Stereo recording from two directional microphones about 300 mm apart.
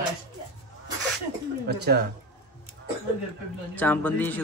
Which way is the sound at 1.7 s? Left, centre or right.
Right.